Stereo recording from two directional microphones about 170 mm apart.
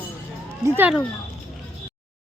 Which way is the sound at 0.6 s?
10° right (ahead or behind).